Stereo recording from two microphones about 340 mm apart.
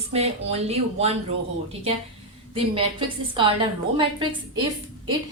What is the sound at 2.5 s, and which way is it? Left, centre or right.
A woman's voice, centre.